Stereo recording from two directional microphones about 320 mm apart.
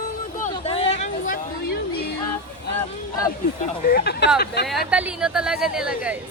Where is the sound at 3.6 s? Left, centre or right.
Left.